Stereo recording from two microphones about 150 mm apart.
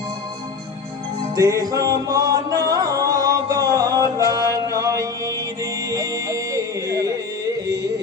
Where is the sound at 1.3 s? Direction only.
20° right (ahead or behind).